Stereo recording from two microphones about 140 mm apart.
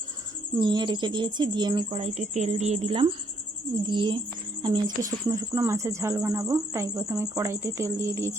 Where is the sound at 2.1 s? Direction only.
50° right (ahead or behind).